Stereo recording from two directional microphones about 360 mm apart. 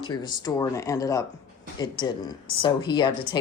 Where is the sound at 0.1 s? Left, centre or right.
Centre.